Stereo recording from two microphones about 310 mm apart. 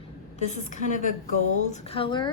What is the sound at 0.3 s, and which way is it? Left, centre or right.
A woman's voice, left.